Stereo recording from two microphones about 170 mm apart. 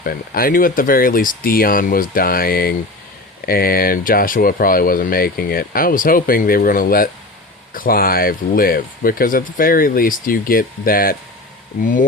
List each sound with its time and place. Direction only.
0.0 s speech: 60° left (ahead or behind)